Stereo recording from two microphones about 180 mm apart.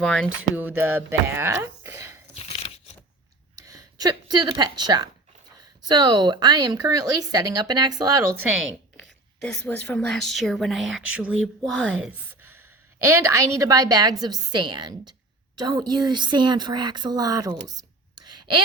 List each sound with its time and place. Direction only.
0.0 s a woman's voice: 5° left (ahead or behind)
0.5 s speech: 10° right (ahead or behind)
2.3 s a sound: 35° left (ahead or behind)
3.7 s speech: 20° right (ahead or behind)
8.5 s a sound: centre (ahead or behind)
9.4 s a woman's voice: 5° left (ahead or behind)
13.0 s speech: 15° right (ahead or behind)
18.3 s whispering: 25° right (ahead or behind)